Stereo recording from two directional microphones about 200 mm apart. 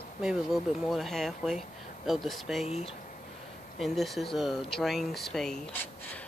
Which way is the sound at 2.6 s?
30° left (ahead or behind).